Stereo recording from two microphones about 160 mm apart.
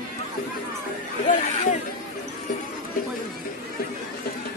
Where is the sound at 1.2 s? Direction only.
50° left (ahead or behind).